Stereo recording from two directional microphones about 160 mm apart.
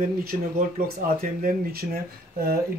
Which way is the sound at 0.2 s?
65° right (ahead or behind).